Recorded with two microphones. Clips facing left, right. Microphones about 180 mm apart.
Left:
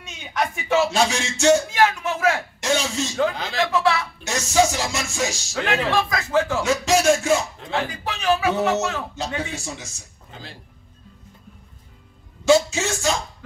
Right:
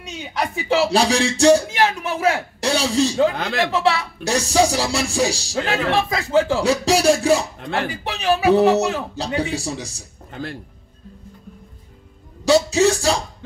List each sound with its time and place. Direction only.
0.2 s music: 35° right (ahead or behind)
10.3 s speech: 55° right (ahead or behind)
12.4 s speech: 35° right (ahead or behind)